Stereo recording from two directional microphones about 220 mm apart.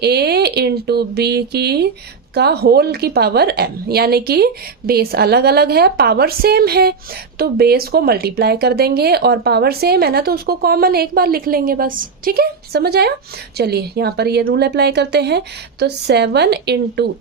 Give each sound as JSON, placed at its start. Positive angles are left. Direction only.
{"t": 0.0, "sound": "speech", "side_deg": -45}